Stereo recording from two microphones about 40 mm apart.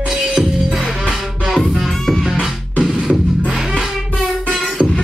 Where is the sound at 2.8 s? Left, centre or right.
Centre.